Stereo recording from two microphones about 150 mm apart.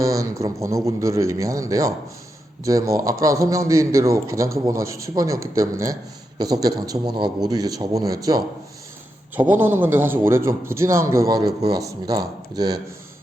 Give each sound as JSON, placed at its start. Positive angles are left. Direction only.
{"t": 0.0, "sound": "a man's voice", "side_deg": -20}
{"t": 9.3, "sound": "a man's voice", "side_deg": -10}